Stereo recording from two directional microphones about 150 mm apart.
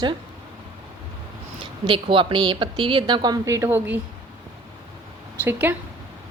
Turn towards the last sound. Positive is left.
turn(degrees=-15)  # may be behind; listen again after turning